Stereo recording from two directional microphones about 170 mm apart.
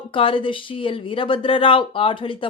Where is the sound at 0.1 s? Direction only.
30° left (ahead or behind).